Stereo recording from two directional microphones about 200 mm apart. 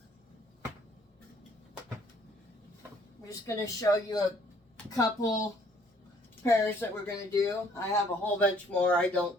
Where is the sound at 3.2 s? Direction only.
15° left (ahead or behind).